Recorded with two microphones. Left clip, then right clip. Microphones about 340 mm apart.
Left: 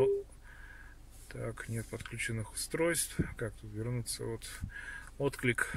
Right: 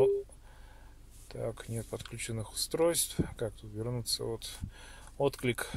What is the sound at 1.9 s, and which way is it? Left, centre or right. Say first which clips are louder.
Speech: left 3 dB; centre.